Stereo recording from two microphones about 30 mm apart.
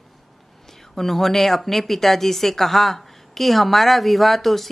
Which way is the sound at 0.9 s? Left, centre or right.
Centre.